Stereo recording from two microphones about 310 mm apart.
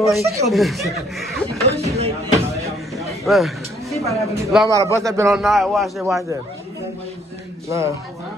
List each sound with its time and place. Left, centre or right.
0.1 s a man's voice: centre
1.6 s speech: centre
2.6 s a sound: centre
4.0 s a man's voice: centre
7.6 s a man's voice: centre